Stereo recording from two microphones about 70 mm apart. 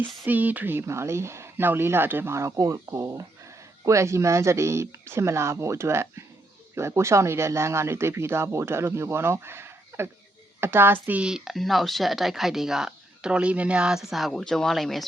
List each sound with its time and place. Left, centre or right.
0.0 s speech: right
2.3 s speech: right
11.2 s speech: centre